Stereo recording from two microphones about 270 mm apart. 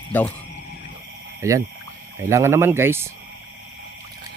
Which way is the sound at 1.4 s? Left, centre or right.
Centre.